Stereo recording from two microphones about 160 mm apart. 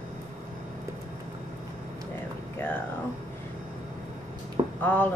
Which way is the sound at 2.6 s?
10° left (ahead or behind).